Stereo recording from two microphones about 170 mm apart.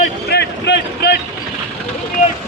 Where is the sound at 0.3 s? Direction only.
85° left.